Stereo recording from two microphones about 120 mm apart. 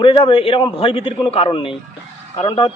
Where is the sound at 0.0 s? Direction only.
45° left (ahead or behind).